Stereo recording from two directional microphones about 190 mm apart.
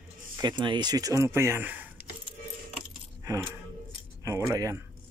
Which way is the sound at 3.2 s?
15° right (ahead or behind).